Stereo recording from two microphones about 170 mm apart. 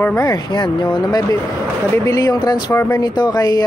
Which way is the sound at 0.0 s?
10° left (ahead or behind).